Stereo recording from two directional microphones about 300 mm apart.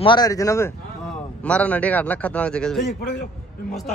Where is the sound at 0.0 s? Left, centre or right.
Centre.